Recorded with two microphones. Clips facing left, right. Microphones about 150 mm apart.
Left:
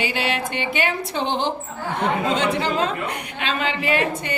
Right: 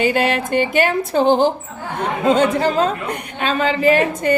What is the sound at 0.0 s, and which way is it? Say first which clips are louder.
A woman's voice: right 7 dB; 45° right (ahead or behind).